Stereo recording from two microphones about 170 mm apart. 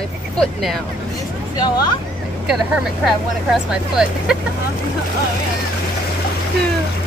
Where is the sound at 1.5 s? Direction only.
25° left (ahead or behind).